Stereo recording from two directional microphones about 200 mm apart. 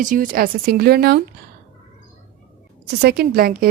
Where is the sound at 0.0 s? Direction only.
40° right (ahead or behind).